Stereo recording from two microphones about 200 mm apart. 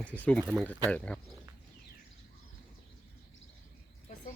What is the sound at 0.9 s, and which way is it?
Speech, 5° left (ahead or behind).